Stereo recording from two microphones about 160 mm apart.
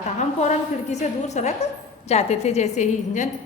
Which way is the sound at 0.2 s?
45° left (ahead or behind).